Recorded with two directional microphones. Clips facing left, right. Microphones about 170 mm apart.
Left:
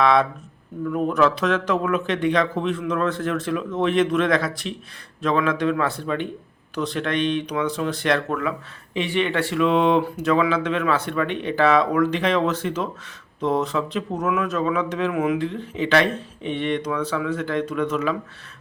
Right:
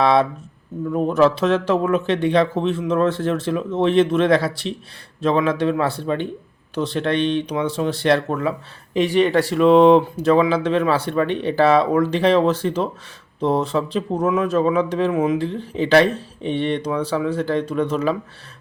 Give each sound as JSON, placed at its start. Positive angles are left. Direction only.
{"t": 0.0, "sound": "speech", "side_deg": -30}
{"t": 8.9, "sound": "speech", "side_deg": -40}